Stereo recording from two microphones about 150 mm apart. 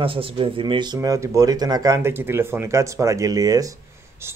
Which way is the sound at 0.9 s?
20° right (ahead or behind).